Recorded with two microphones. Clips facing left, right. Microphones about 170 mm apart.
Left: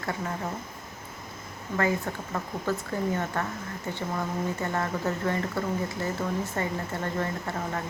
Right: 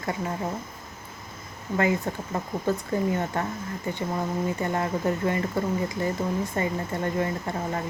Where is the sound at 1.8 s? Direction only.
20° right (ahead or behind).